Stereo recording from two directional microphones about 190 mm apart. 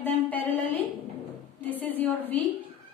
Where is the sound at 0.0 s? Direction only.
10° left (ahead or behind).